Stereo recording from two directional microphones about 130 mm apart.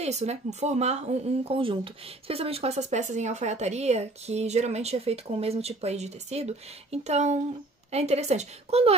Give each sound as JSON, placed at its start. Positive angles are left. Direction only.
{"t": 0.0, "sound": "speech", "side_deg": -55}